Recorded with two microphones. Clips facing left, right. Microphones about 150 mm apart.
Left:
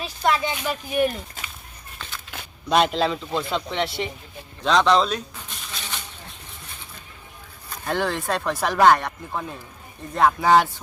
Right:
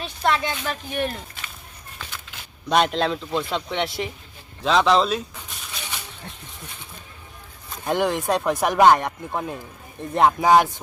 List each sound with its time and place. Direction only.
0.0 s speech: 5° left (ahead or behind)
2.6 s a man's voice: centre (ahead or behind)
4.6 s a sound: 5° right (ahead or behind)
7.9 s speech: 15° right (ahead or behind)